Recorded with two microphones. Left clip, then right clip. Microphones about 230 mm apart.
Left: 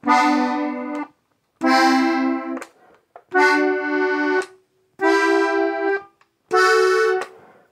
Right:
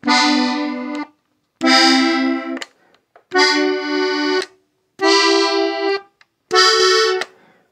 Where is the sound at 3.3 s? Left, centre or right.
Right.